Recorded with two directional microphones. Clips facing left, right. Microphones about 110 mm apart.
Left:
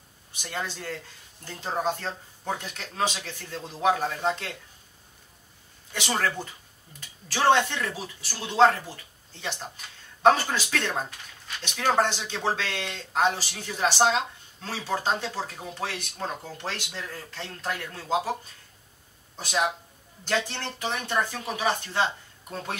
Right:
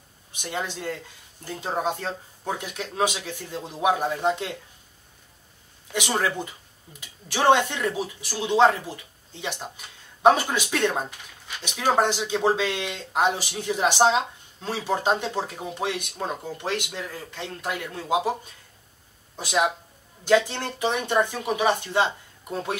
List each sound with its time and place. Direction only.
0.4 s speech: 15° right (ahead or behind)
5.9 s speech: 15° right (ahead or behind)
19.3 s speech: 5° right (ahead or behind)